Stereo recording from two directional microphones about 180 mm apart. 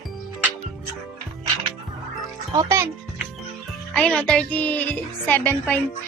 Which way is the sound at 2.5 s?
20° right (ahead or behind).